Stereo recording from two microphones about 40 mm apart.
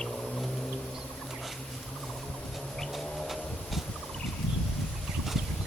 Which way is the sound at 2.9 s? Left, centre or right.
Centre.